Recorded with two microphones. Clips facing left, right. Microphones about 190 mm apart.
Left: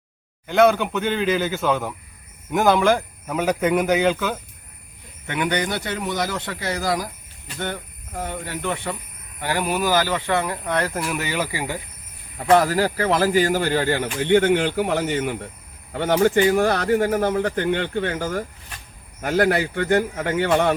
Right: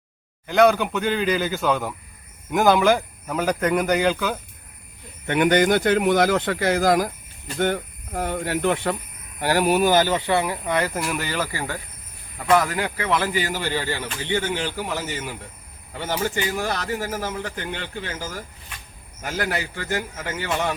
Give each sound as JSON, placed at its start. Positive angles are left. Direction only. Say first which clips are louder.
{"t": 0.4, "sound": "speech", "louder": "even", "side_deg": 0}
{"t": 5.3, "sound": "speech", "louder": "right 6 dB", "side_deg": -50}
{"t": 9.6, "sound": "speech", "louder": "right 5 dB", "side_deg": -65}
{"t": 9.8, "sound": "speech", "louder": "right 2 dB", "side_deg": -20}
{"t": 12.4, "sound": "speech", "louder": "left 3 dB", "side_deg": 30}